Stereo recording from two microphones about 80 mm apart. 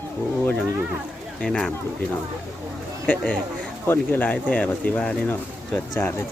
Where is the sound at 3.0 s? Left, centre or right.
Centre.